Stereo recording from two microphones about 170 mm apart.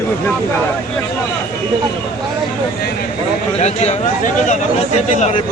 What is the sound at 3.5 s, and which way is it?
Speech, 40° left (ahead or behind).